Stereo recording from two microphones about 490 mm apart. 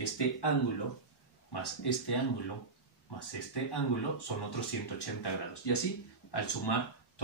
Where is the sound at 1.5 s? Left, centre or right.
Left.